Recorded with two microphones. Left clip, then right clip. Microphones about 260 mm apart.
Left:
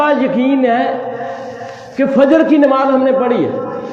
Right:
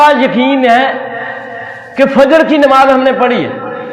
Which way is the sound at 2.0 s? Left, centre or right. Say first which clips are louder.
Right 4 dB; right.